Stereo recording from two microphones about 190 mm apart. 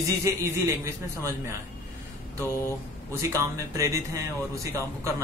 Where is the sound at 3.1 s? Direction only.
15° right (ahead or behind).